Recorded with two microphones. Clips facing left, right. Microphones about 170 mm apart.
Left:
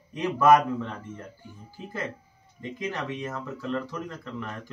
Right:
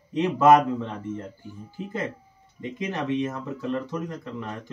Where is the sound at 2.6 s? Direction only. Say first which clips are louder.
Right 3 dB; 20° right (ahead or behind).